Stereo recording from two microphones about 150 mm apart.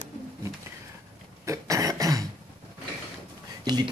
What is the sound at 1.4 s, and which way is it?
Speech, 20° right (ahead or behind).